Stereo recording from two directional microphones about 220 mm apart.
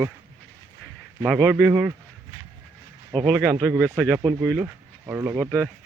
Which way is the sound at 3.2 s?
Centre (ahead or behind).